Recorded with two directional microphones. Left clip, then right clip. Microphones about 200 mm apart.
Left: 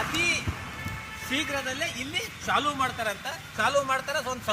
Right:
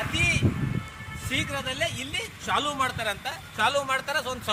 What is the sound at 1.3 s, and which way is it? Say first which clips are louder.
Speech: even; 30° right (ahead or behind).